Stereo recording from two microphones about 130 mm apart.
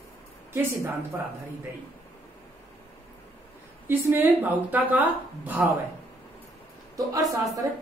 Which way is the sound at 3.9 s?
15° right (ahead or behind).